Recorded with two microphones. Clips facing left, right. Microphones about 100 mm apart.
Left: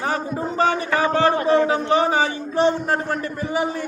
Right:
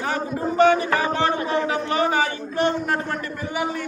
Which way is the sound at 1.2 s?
35° left (ahead or behind).